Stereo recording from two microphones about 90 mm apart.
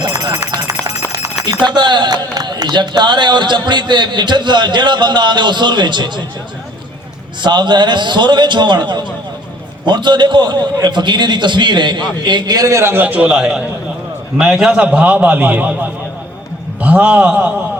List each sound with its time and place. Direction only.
0.0 s run: 50° right (ahead or behind)
0.5 s a sound: 45° right (ahead or behind)
1.6 s a man's voice: 55° right (ahead or behind)
7.4 s a man's voice: 55° right (ahead or behind); by 17.5 s 15° right (ahead or behind)